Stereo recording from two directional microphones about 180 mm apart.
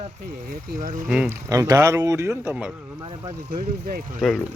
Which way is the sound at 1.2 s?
15° right (ahead or behind).